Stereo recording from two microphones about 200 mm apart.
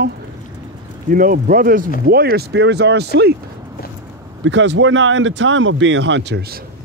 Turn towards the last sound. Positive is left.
turn(degrees=-55)  # may be behind; listen again after turning